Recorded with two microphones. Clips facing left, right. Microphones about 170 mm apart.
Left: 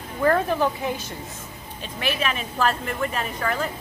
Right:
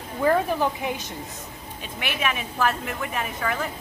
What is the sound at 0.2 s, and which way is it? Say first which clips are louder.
Speech: left 1 dB; 10° right (ahead or behind).